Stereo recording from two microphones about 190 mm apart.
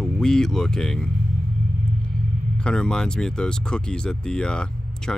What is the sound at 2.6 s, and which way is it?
Speech, 5° left (ahead or behind).